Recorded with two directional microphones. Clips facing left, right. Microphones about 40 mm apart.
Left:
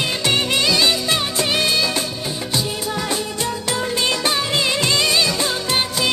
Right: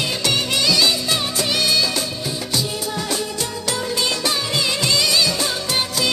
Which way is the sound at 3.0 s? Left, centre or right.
Left.